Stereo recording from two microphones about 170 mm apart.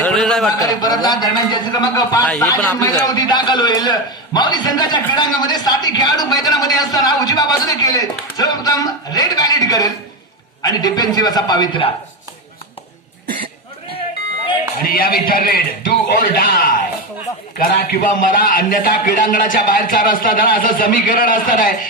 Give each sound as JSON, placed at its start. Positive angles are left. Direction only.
{"t": 0.0, "sound": "a sound", "side_deg": 5}
{"t": 0.6, "sound": "a man's voice", "side_deg": 20}
{"t": 2.2, "sound": "speech", "side_deg": 5}
{"t": 2.8, "sound": "a man's voice", "side_deg": 20}
{"t": 14.8, "sound": "a man's voice", "side_deg": 60}